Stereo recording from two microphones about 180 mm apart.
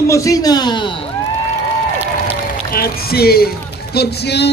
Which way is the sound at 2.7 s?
60° left (ahead or behind).